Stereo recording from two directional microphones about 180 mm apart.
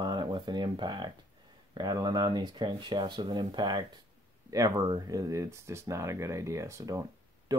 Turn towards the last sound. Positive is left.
turn(degrees=-20)  # may be behind; listen again after turning